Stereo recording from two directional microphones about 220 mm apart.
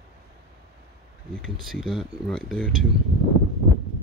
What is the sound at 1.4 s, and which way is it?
Speech, centre (ahead or behind).